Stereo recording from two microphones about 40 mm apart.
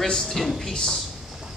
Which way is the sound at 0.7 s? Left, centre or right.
Centre.